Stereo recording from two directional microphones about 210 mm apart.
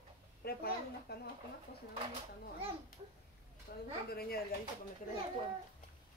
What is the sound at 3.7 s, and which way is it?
Speech, 50° left (ahead or behind).